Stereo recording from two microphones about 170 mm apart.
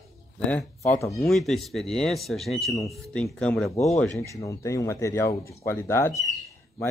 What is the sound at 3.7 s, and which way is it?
Speech, 40° left (ahead or behind).